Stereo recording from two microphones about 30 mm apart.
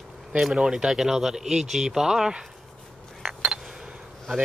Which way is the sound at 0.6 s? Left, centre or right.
Right.